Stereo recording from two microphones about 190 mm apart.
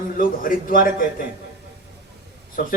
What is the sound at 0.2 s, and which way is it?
Speech, 45° left (ahead or behind).